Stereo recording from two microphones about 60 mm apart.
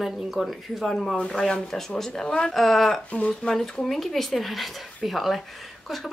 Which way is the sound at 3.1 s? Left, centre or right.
Left.